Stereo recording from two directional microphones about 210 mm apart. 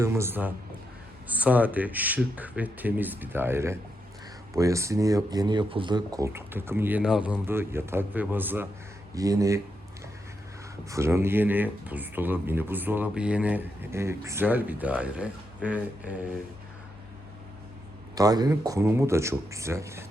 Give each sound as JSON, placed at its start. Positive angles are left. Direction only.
{"t": 0.0, "sound": "speech", "side_deg": -10}
{"t": 10.8, "sound": "speech", "side_deg": -15}
{"t": 18.1, "sound": "speech", "side_deg": -20}